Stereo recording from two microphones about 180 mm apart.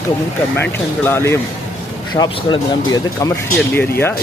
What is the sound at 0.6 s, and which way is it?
A man's voice, 10° left (ahead or behind).